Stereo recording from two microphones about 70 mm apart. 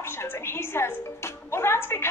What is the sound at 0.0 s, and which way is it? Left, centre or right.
Speech, left.